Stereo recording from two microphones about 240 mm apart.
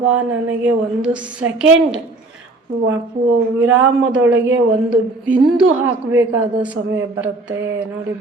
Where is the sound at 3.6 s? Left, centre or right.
Right.